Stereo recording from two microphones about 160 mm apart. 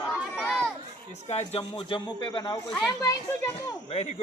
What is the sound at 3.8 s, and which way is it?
Speech, 40° left (ahead or behind).